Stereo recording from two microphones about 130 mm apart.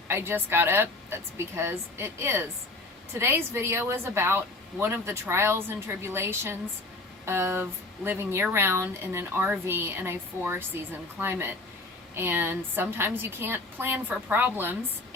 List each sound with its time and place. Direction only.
0.1 s speech: 20° right (ahead or behind)